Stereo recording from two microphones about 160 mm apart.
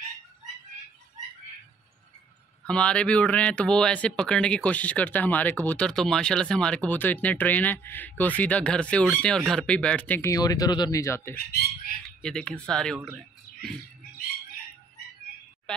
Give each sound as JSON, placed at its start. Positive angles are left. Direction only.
{"t": 2.6, "sound": "speech", "side_deg": 5}
{"t": 11.3, "sound": "bird", "side_deg": 70}
{"t": 12.2, "sound": "speech", "side_deg": 5}
{"t": 13.5, "sound": "a sound", "side_deg": 55}